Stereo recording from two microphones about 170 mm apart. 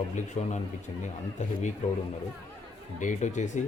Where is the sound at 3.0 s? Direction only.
45° left (ahead or behind).